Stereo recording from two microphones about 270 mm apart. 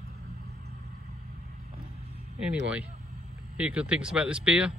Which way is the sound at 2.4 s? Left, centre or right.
Centre.